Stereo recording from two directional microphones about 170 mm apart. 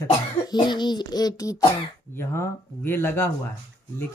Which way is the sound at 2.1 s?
15° left (ahead or behind).